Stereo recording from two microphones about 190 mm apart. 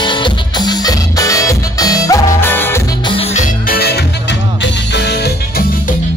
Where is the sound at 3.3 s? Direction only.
45° left (ahead or behind).